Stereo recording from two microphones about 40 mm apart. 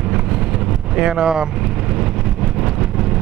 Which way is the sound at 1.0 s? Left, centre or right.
Centre.